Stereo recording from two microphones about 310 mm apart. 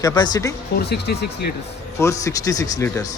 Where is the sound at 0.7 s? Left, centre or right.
Left.